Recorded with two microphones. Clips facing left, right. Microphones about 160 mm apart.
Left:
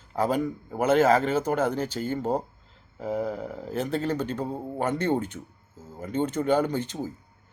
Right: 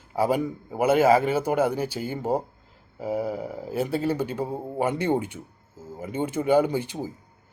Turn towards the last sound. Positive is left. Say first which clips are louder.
# right 3 dB
turn(degrees=-10)  # may be behind; listen again after turning